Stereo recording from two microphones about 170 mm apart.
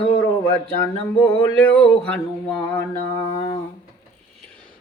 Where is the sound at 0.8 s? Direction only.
15° left (ahead or behind).